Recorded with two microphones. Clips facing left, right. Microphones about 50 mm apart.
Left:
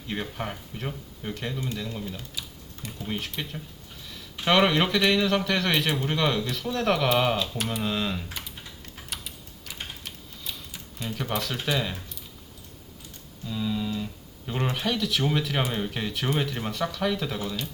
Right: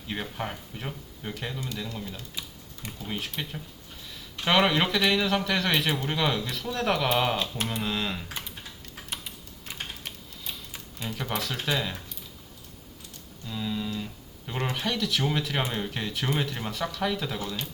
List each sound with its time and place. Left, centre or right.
0.1 s a man's voice: centre
10.0 s typing: right
11.1 s a man's voice: centre
13.5 s a man's voice: centre